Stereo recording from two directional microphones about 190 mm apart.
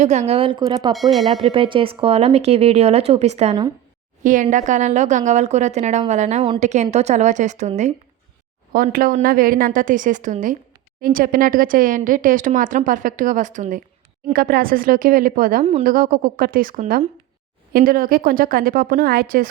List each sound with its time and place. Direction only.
0.0 s speech: 35° right (ahead or behind); by 0.9 s 20° right (ahead or behind)
0.9 s speech: centre (ahead or behind)
1.4 s a woman's voice: 25° right (ahead or behind)
4.2 s a woman's voice: 45° right (ahead or behind)
8.7 s speech: 50° right (ahead or behind)